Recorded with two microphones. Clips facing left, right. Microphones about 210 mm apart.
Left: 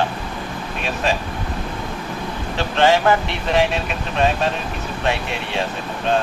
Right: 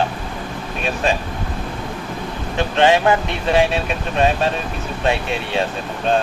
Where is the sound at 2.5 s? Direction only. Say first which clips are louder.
Right 1 dB; 20° right (ahead or behind).